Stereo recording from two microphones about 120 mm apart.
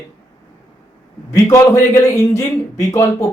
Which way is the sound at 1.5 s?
25° left (ahead or behind).